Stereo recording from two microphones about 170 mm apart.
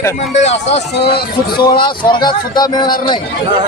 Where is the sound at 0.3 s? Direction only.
40° left (ahead or behind).